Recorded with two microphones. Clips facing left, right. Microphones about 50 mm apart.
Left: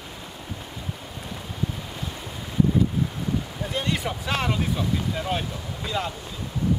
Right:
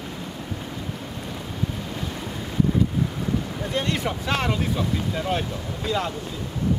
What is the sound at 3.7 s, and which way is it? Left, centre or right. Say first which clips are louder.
Speech: right 2 dB; centre.